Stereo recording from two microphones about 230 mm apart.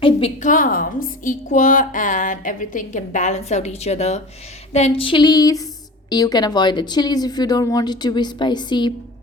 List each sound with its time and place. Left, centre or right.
0.0 s a woman's voice: left
4.7 s a sound: left
6.1 s speech: centre